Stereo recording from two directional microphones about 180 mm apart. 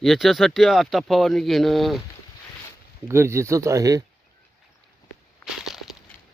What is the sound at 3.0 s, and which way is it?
Speech, 15° right (ahead or behind).